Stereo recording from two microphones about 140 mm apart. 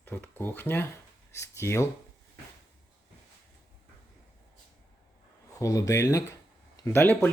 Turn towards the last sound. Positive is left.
turn(degrees=15)  # may be behind; listen again after turning